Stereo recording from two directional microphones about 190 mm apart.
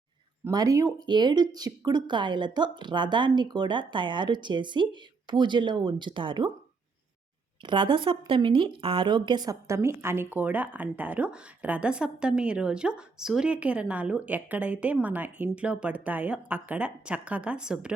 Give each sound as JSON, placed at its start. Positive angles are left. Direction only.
{"t": 0.4, "sound": "speech", "side_deg": -20}
{"t": 7.6, "sound": "speech", "side_deg": -25}